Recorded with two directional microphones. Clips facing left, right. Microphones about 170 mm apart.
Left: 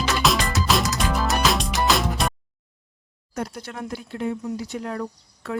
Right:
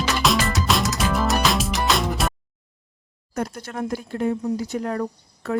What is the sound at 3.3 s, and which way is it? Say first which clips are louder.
Speech: right 3 dB; 50° right (ahead or behind).